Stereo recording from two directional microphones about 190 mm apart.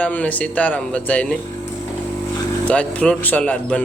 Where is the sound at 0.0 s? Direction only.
5° left (ahead or behind).